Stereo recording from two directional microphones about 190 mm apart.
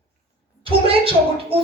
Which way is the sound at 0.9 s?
30° right (ahead or behind).